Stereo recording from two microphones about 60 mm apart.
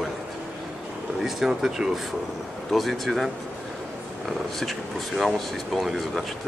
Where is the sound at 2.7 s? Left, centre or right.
Centre.